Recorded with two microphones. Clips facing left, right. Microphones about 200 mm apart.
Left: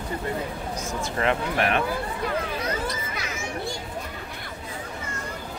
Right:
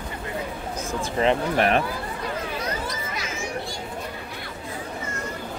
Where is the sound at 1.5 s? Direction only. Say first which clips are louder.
Right 3 dB; 35° right (ahead or behind).